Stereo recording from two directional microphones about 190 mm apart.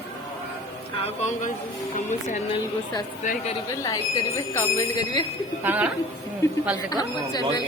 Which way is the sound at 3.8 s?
15° left (ahead or behind).